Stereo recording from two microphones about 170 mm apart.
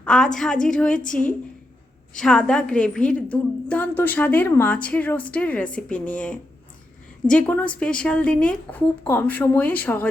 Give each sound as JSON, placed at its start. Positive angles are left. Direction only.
{"t": 0.0, "sound": "a woman's voice", "side_deg": 5}
{"t": 0.9, "sound": "a woman's voice", "side_deg": 50}
{"t": 2.1, "sound": "a woman's voice", "side_deg": 5}